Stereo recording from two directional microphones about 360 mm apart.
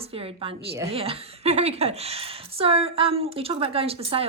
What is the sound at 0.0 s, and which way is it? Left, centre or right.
A woman's voice, centre.